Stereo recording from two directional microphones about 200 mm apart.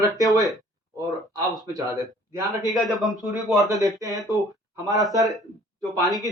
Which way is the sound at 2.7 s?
Centre (ahead or behind).